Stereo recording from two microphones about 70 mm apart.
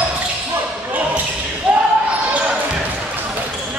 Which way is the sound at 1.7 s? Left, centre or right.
Centre.